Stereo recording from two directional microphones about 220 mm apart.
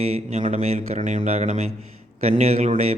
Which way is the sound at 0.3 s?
30° right (ahead or behind).